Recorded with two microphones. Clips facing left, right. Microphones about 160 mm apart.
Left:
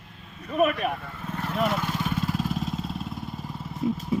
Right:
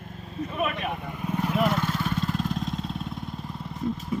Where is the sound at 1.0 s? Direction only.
15° right (ahead or behind).